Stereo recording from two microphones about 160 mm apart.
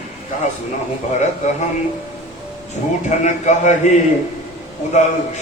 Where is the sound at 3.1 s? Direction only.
50° left (ahead or behind).